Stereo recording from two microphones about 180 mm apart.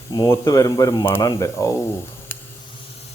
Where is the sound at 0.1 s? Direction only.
20° left (ahead or behind).